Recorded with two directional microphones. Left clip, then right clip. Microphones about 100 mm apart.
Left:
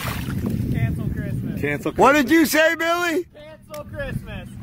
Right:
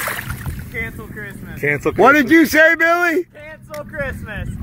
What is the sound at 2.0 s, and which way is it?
Speech, 5° left (ahead or behind).